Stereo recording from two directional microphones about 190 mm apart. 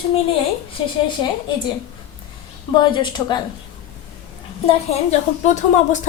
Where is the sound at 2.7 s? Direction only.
25° left (ahead or behind).